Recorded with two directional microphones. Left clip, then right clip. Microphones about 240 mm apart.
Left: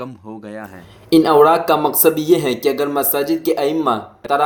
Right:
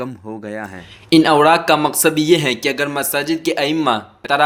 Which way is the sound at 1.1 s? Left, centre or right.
Right.